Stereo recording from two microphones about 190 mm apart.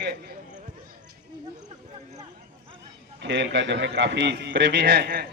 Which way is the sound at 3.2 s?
65° right (ahead or behind).